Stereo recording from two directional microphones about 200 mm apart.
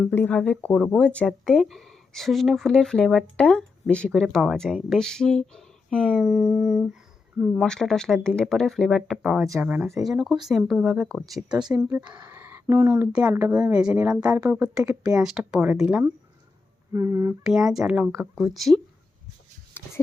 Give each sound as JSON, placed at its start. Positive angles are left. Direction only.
{"t": 0.1, "sound": "speech", "side_deg": 10}
{"t": 16.9, "sound": "speech", "side_deg": -15}
{"t": 19.8, "sound": "a sound", "side_deg": 10}